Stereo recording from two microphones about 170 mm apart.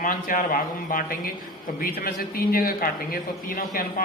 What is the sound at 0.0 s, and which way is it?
A man's voice, 55° left (ahead or behind).